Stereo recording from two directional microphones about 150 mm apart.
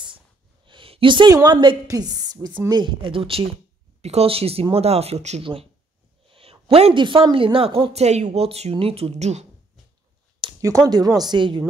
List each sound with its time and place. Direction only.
0.7 s speech: 35° right (ahead or behind)
10.6 s speech: 20° right (ahead or behind)